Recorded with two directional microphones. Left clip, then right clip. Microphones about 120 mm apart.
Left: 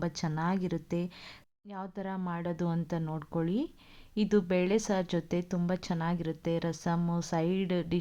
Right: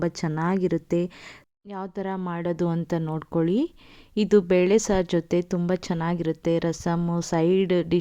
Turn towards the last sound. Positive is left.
turn(degrees=-50)  # may be behind; listen again after turning